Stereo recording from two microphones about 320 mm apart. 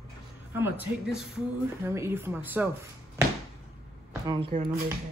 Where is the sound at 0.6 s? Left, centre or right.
Centre.